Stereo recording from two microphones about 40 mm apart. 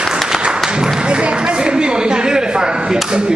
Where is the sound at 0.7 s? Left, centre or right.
Right.